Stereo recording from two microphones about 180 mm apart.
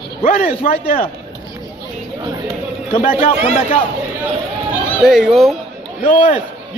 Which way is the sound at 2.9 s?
30° left (ahead or behind).